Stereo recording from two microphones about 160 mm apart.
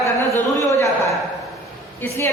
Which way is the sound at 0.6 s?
20° left (ahead or behind).